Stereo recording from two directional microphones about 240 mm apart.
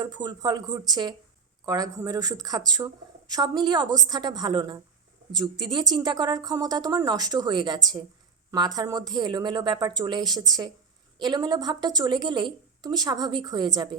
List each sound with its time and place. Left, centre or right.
0.0 s speech: centre